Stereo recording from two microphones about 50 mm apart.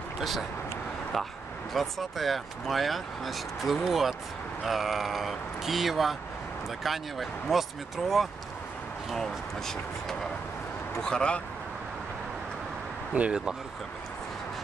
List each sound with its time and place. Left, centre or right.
0.2 s speech: centre
9.1 s speech: centre
13.1 s speech: right